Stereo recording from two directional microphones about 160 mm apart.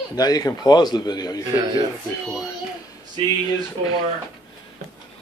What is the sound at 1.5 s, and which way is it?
Speech, 20° right (ahead or behind).